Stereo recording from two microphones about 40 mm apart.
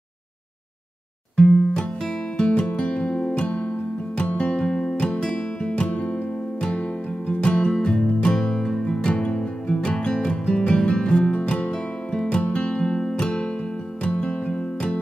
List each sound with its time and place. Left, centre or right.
1.3 s music: centre